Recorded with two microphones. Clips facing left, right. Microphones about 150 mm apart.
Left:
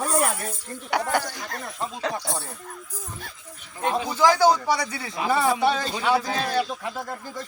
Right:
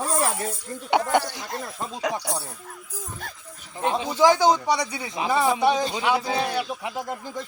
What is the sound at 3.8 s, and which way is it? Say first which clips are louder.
A man's voice: right 2 dB; 20° right (ahead or behind).